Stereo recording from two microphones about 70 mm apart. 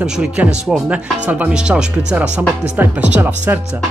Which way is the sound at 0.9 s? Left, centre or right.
Right.